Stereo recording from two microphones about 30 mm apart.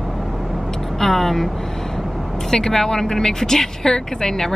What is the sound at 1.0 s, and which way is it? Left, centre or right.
Speech, centre.